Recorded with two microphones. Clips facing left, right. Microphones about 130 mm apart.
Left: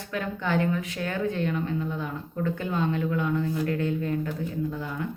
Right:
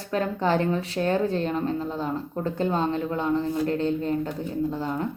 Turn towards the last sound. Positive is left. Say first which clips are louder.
# right 4 dB
turn(degrees=-35)  # may be behind; listen again after turning